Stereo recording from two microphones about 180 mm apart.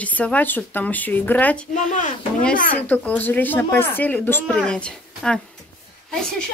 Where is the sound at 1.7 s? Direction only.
45° left (ahead or behind).